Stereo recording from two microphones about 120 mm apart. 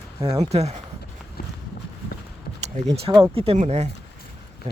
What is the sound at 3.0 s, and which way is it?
Speech, 50° right (ahead or behind).